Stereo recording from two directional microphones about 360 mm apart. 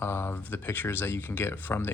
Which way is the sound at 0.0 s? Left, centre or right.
Centre.